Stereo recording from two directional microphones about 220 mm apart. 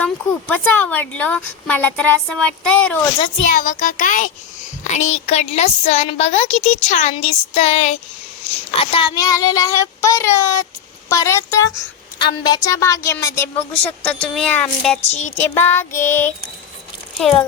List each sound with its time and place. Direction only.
0.0 s a woman's voice: 5° left (ahead or behind)
3.4 s a child's voice: 35° left (ahead or behind); by 16.3 s 10° left (ahead or behind)
17.2 s a woman's voice: centre (ahead or behind)